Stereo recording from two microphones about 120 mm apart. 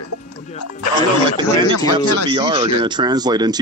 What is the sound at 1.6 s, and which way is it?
Speech, 40° right (ahead or behind).